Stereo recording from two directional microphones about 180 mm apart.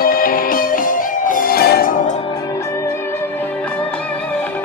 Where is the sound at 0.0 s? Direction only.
55° left (ahead or behind).